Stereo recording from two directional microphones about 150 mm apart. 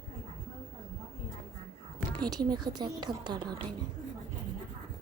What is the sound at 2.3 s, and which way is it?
A woman's voice, 25° right (ahead or behind).